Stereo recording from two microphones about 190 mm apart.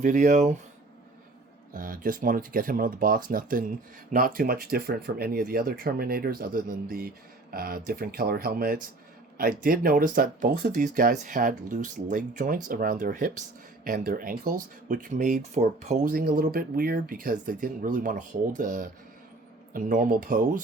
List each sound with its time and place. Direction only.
0.0 s speech: 40° right (ahead or behind)
1.7 s speech: 45° right (ahead or behind)